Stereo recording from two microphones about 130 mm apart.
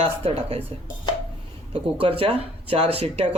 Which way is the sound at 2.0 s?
45° right (ahead or behind).